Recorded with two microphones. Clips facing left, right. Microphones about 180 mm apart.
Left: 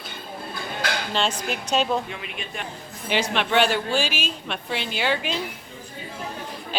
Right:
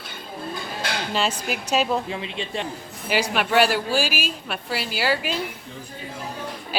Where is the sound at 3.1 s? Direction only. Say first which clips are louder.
Right 1 dB; 10° right (ahead or behind).